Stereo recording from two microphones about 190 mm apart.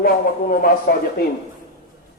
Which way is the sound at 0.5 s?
50° left (ahead or behind).